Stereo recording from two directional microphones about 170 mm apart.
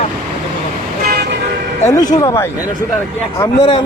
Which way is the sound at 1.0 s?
70° right (ahead or behind).